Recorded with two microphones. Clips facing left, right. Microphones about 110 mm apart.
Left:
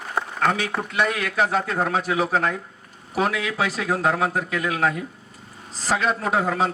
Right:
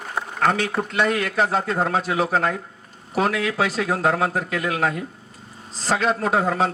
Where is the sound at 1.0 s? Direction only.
35° right (ahead or behind).